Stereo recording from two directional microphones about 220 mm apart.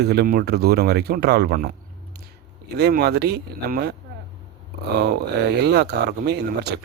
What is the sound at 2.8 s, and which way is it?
Speech, 50° right (ahead or behind).